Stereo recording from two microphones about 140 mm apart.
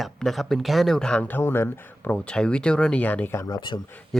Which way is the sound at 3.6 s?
35° left (ahead or behind).